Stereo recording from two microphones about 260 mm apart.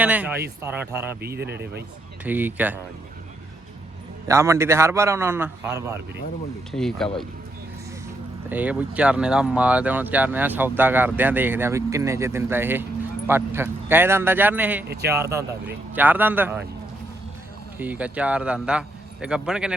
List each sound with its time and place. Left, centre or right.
0.0 s a man's voice: centre
1.2 s speech: right
2.2 s speech: centre
4.3 s speech: centre
6.7 s a man's voice: centre
8.4 s speech: centre
17.7 s a man's voice: centre